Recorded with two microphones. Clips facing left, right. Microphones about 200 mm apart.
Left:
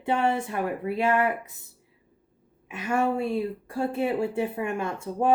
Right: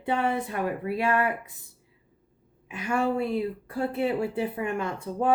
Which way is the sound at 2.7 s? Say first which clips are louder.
Left 1 dB; 25° left (ahead or behind).